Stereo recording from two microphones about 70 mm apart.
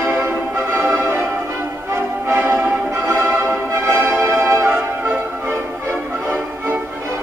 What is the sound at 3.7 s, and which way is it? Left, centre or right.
Music, right.